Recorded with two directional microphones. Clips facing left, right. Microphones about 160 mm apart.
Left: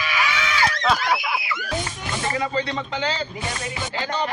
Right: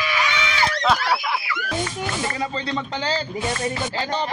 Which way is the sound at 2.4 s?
35° right (ahead or behind).